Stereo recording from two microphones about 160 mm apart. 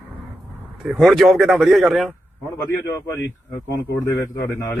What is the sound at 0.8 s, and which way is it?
Speech, centre (ahead or behind).